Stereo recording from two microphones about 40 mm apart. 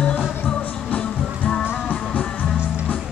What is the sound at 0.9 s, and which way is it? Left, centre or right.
Music, left.